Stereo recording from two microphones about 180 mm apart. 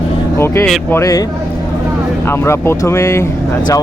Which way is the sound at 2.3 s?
15° left (ahead or behind).